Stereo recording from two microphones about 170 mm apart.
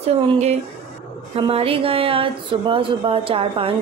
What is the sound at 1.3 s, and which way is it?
Speech, 35° right (ahead or behind).